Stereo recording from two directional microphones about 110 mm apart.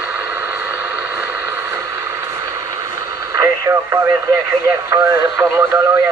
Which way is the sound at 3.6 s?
25° right (ahead or behind).